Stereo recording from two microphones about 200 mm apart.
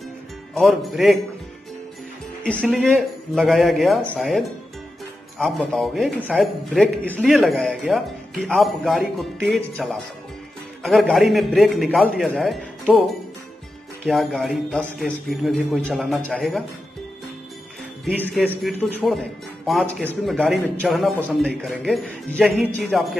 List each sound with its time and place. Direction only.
0.6 s a man's voice: centre (ahead or behind)
2.4 s a man's voice: 5° left (ahead or behind)
18.2 s a man's voice: 5° left (ahead or behind)